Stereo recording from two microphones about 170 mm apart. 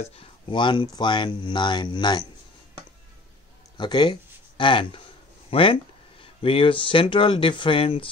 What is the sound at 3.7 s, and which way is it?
Speech, 25° left (ahead or behind).